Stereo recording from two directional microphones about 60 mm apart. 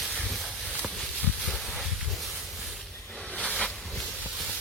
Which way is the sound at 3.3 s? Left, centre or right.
Left.